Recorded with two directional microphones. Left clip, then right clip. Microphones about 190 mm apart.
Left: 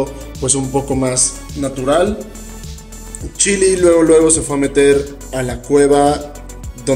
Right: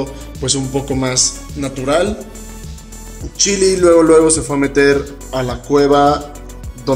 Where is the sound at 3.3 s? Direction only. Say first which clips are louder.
Even; 10° left (ahead or behind).